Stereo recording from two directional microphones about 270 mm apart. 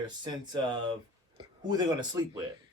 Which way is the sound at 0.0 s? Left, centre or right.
Centre.